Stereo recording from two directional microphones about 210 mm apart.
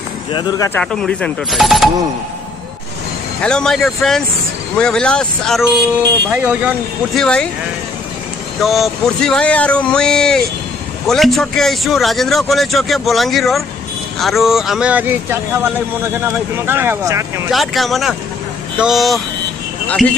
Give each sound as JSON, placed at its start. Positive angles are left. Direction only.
{"t": 0.3, "sound": "speech", "side_deg": 20}
{"t": 0.7, "sound": "speech", "side_deg": 5}
{"t": 3.4, "sound": "speech", "side_deg": 5}
{"t": 7.2, "sound": "speech", "side_deg": 5}
{"t": 8.5, "sound": "speech", "side_deg": 0}
{"t": 17.5, "sound": "speech", "side_deg": 0}